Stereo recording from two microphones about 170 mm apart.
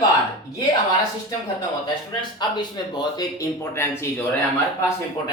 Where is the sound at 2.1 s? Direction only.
25° left (ahead or behind).